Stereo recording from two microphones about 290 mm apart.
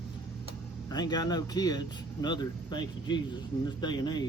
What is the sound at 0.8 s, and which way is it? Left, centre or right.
Speech, centre.